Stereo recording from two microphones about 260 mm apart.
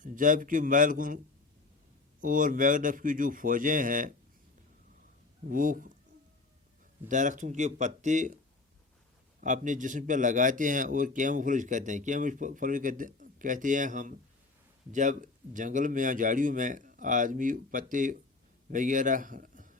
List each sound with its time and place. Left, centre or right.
0.0 s a man's voice: right
2.2 s a man's voice: right
5.5 s a man's voice: right
7.1 s speech: right
9.4 s a man's voice: right